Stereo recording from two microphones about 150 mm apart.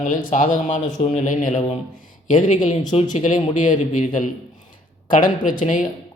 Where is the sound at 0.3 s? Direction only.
65° left (ahead or behind).